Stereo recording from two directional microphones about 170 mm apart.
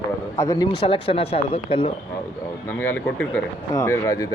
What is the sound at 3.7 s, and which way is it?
Speech, 20° left (ahead or behind).